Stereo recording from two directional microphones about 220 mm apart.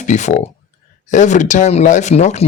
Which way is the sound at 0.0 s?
35° left (ahead or behind).